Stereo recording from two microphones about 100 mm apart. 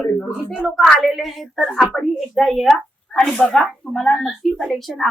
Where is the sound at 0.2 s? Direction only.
20° left (ahead or behind).